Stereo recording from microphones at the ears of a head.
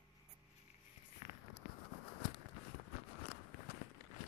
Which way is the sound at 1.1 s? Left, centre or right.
Left.